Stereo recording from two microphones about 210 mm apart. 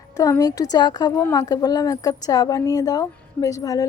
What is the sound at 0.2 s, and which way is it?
Speech, 15° left (ahead or behind).